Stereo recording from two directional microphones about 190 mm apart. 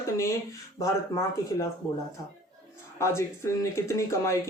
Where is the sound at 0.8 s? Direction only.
15° left (ahead or behind).